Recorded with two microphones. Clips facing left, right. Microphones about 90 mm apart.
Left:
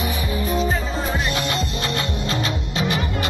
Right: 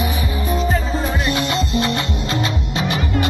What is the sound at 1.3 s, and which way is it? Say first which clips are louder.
Music: right 4 dB; 25° right (ahead or behind).